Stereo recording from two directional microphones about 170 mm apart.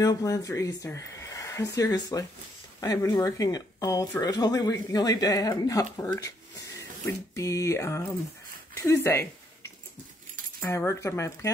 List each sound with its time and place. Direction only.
0.0 s speech: 20° left (ahead or behind)
7.3 s speech: 20° left (ahead or behind)
10.6 s speech: 15° left (ahead or behind)